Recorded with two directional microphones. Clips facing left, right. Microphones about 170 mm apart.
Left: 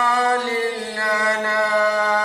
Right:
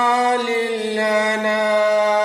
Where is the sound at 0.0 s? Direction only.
20° right (ahead or behind).